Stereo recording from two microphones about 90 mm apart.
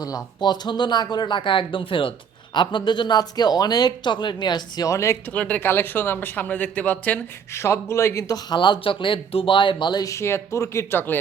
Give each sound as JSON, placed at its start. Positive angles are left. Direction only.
{"t": 0.0, "sound": "speech", "side_deg": 45}
{"t": 4.9, "sound": "speech", "side_deg": 35}
{"t": 5.3, "sound": "speech", "side_deg": 15}
{"t": 7.5, "sound": "speech", "side_deg": 30}
{"t": 8.4, "sound": "speech", "side_deg": 55}
{"t": 10.0, "sound": "speech", "side_deg": 35}